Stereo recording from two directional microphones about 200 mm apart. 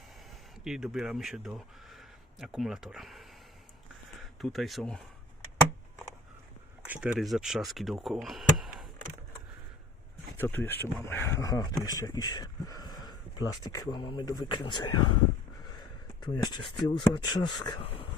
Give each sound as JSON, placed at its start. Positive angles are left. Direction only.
{"t": 0.3, "sound": "speech", "side_deg": -5}
{"t": 6.8, "sound": "speech", "side_deg": -5}
{"t": 10.3, "sound": "speech", "side_deg": 10}
{"t": 16.2, "sound": "speech", "side_deg": 20}